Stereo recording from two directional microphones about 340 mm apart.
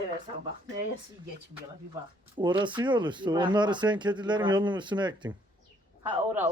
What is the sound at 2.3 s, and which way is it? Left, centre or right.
Speech, centre.